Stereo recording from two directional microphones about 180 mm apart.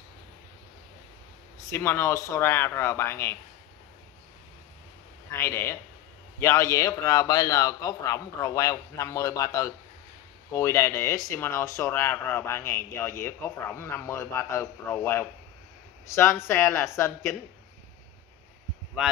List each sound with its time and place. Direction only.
1.7 s speech: 15° left (ahead or behind)
5.3 s a man's voice: 15° left (ahead or behind)
19.0 s speech: 5° right (ahead or behind)